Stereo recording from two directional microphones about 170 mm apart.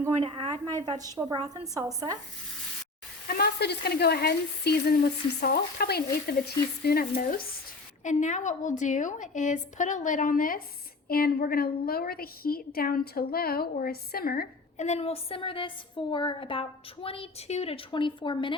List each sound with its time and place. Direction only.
0.2 s a woman's voice: 35° right (ahead or behind)
3.2 s a woman's voice: 65° left (ahead or behind)
14.8 s a woman's voice: 40° left (ahead or behind)